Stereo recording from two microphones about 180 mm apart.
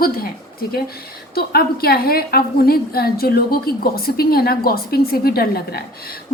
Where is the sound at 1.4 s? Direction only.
60° left (ahead or behind).